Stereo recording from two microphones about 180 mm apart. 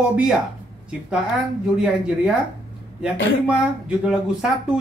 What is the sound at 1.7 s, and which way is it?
Speech, 5° right (ahead or behind).